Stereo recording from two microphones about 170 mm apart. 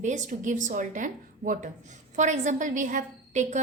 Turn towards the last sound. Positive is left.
turn(degrees=-45)  # may be behind; listen again after turning